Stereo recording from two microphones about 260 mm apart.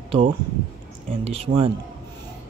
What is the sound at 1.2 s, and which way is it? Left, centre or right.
Speech, right.